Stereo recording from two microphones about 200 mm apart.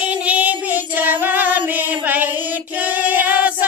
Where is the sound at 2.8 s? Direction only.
10° right (ahead or behind).